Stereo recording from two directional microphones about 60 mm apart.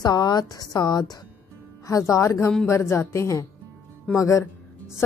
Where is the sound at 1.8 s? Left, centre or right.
Left.